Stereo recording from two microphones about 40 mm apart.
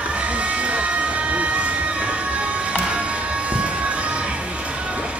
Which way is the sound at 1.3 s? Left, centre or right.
Right.